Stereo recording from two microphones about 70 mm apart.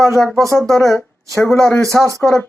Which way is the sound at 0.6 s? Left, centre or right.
Centre.